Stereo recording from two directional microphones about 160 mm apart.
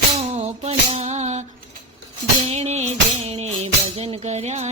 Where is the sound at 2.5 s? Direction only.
45° right (ahead or behind).